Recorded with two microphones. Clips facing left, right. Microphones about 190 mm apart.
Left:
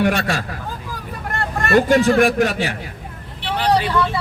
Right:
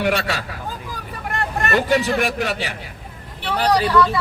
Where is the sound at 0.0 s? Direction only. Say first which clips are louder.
Left 2 dB; 50° left (ahead or behind).